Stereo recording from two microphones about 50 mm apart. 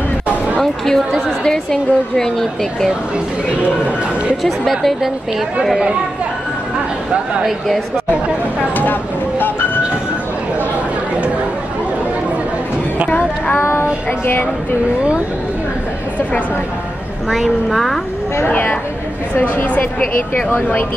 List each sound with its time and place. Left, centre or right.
0.8 s a woman's voice: centre
3.6 s speech: right
4.4 s a woman's voice: centre
7.4 s a woman's voice: centre
13.6 s child singing: left
14.2 s speech: left
17.3 s a woman's voice: centre
18.5 s a woman's voice: left